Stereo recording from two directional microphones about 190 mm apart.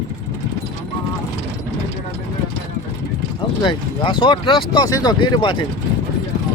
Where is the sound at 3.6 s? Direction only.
25° left (ahead or behind).